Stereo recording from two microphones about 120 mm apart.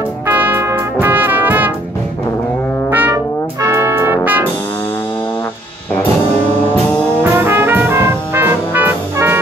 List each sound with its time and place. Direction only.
0.3 s music: 15° right (ahead or behind)
1.0 s brass instrument: 15° right (ahead or behind)
2.9 s brass instrument: 15° right (ahead or behind)
3.6 s music: 25° right (ahead or behind)
7.3 s brass instrument: 20° right (ahead or behind)